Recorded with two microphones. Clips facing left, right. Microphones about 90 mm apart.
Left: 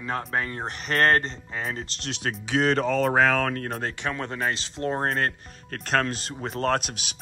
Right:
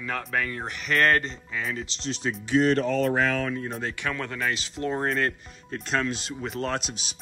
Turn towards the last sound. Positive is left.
turn(degrees=60)  # may be behind; listen again after turning